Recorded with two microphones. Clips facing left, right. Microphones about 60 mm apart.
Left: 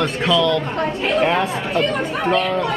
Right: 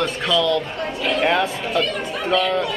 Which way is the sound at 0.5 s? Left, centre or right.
Left.